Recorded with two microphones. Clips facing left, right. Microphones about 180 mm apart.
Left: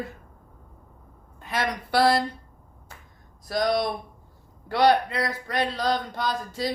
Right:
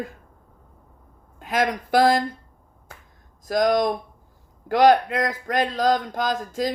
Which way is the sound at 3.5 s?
45° right (ahead or behind).